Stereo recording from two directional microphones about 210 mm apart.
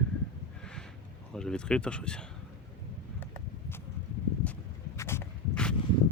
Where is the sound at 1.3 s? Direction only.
5° left (ahead or behind).